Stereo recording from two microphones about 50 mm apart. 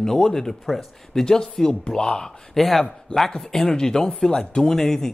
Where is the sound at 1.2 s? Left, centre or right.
Centre.